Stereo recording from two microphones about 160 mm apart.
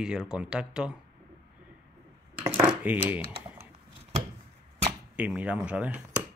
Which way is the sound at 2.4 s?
10° right (ahead or behind).